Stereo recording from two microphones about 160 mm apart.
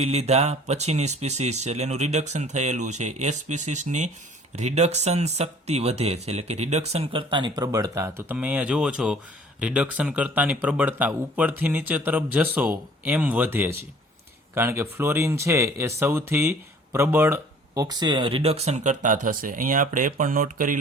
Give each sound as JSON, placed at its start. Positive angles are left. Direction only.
{"t": 0.0, "sound": "speech", "side_deg": -40}
{"t": 8.3, "sound": "speech", "side_deg": -10}